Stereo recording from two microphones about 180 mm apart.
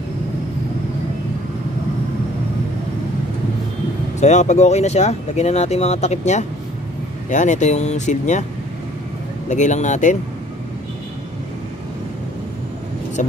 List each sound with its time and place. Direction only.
4.2 s speech: 40° left (ahead or behind)
9.5 s speech: 40° left (ahead or behind)